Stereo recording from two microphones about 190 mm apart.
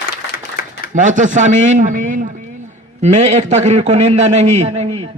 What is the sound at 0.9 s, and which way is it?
A man's voice, 40° right (ahead or behind).